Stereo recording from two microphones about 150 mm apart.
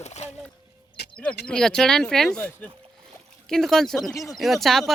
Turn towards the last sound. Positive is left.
turn(degrees=0)  # may be behind; listen again after turning